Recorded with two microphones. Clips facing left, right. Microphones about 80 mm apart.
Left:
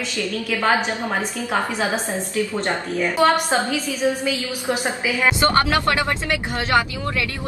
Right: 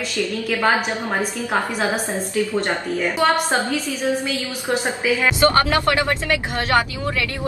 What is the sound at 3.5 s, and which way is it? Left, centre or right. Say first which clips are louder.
Speech: even; centre.